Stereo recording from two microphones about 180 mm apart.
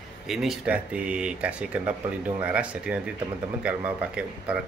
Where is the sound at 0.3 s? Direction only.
Centre (ahead or behind).